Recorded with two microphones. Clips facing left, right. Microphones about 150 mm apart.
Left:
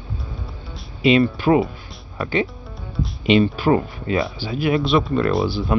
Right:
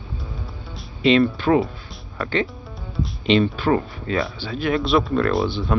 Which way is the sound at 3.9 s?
20° left (ahead or behind).